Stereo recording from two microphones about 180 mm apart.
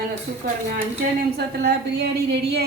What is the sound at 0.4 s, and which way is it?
A woman's voice, 60° right (ahead or behind).